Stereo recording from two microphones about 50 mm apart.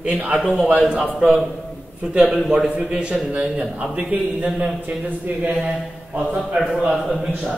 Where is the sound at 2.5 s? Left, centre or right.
Centre.